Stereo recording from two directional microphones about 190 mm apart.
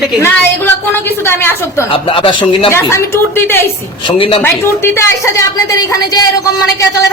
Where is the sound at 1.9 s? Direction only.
25° left (ahead or behind).